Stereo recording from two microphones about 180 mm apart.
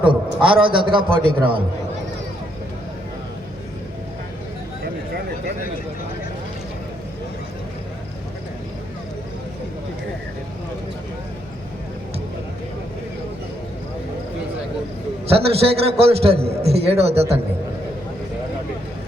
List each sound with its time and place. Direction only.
0.4 s a man's voice: 30° right (ahead or behind)
15.3 s a man's voice: 35° right (ahead or behind)